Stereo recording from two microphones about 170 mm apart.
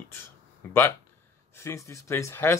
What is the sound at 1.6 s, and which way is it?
Speech, 15° left (ahead or behind).